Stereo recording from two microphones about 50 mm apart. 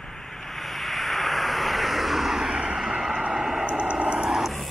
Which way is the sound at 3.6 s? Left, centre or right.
Right.